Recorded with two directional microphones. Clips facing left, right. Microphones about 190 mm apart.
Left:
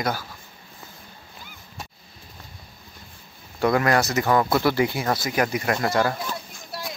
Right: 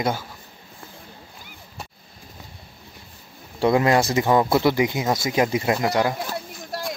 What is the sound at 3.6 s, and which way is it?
A man's voice, 20° right (ahead or behind).